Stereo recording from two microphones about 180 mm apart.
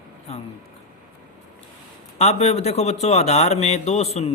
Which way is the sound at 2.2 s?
35° left (ahead or behind).